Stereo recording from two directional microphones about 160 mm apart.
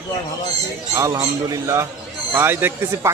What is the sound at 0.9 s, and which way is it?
A man's voice, 20° right (ahead or behind).